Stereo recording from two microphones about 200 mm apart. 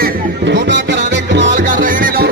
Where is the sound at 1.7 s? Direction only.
45° right (ahead or behind).